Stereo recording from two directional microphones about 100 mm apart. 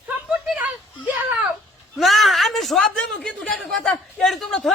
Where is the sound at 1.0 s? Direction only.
15° right (ahead or behind).